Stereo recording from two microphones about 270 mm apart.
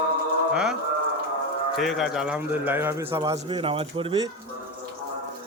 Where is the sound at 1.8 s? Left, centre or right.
Centre.